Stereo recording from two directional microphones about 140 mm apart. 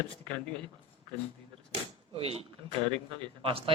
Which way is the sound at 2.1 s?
45° right (ahead or behind).